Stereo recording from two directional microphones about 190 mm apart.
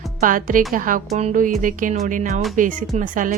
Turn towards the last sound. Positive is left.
turn(degrees=-45)  # may be behind; listen again after turning